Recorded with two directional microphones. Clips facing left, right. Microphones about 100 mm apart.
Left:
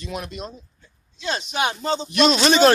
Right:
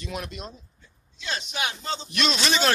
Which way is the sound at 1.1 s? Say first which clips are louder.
Left 6 dB; 35° left (ahead or behind).